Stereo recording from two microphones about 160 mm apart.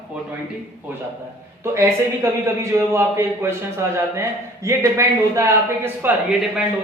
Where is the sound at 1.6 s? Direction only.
15° right (ahead or behind).